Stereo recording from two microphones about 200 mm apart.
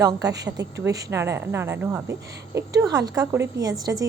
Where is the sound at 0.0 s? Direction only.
20° right (ahead or behind).